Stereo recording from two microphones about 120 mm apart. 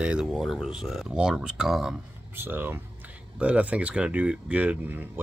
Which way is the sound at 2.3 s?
20° right (ahead or behind).